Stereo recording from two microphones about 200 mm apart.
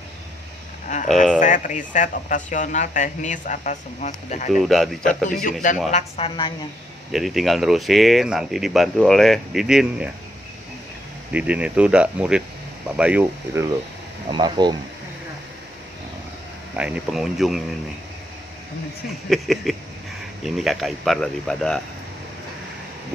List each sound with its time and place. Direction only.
1.4 s speech: 40° left (ahead or behind)
4.5 s speech: centre (ahead or behind)
5.4 s speech: 40° left (ahead or behind)
7.1 s speech: centre (ahead or behind)
11.3 s speech: 5° right (ahead or behind)
14.3 s speech: 20° right (ahead or behind)
16.7 s speech: 5° right (ahead or behind)
19.2 s speech: centre (ahead or behind)